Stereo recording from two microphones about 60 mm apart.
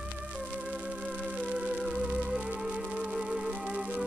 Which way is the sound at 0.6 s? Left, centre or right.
Centre.